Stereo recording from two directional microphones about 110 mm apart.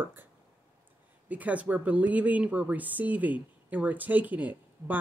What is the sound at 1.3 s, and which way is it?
Speech, 15° right (ahead or behind).